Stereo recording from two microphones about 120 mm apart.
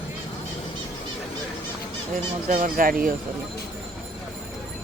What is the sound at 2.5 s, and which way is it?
Speech, 90° right.